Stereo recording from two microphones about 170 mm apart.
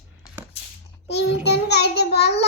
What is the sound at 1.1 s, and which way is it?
Child singing, 75° left (ahead or behind).